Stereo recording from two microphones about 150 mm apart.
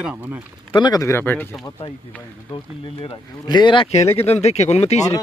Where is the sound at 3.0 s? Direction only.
35° left (ahead or behind).